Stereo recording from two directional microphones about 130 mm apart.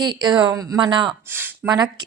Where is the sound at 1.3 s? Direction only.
15° right (ahead or behind).